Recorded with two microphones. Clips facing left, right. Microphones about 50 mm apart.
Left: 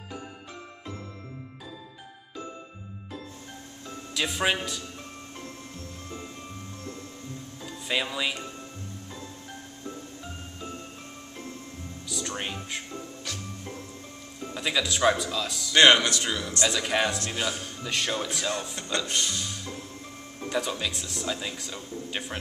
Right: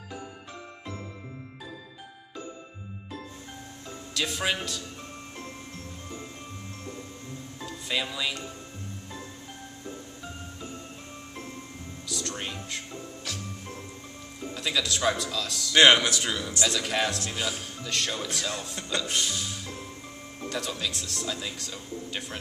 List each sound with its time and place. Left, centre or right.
4.1 s a man's voice: centre
7.9 s a man's voice: centre
12.1 s music: centre
12.4 s a man's voice: centre
12.7 s music: centre
14.5 s a man's voice: centre
20.4 s a man's voice: centre